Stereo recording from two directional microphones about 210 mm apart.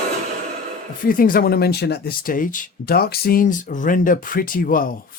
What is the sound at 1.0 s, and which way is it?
Speech, 40° left (ahead or behind).